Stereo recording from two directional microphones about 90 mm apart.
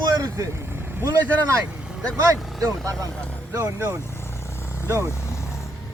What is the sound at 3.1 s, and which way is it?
Speech, 10° left (ahead or behind).